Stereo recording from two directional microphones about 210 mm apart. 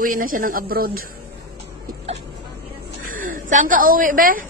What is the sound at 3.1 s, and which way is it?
A woman's voice, 40° right (ahead or behind).